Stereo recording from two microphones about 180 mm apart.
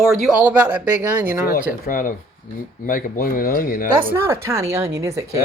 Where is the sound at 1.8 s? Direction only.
50° left (ahead or behind).